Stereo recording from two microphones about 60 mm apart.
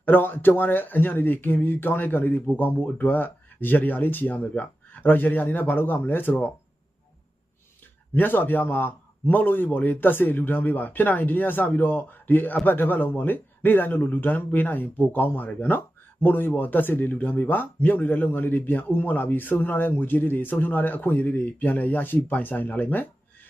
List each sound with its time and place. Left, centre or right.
0.0 s speech: left
8.1 s speech: left